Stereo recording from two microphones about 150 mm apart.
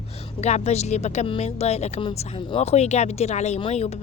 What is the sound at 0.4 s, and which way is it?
A woman's voice, 45° left (ahead or behind).